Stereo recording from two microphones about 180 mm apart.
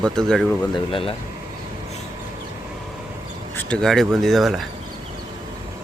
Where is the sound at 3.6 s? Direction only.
5° left (ahead or behind).